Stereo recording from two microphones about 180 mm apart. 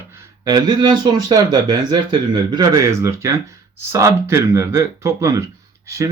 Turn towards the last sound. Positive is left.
turn(degrees=-15)  # may be behind; listen again after turning